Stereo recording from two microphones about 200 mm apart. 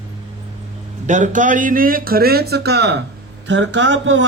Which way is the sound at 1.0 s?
40° right (ahead or behind).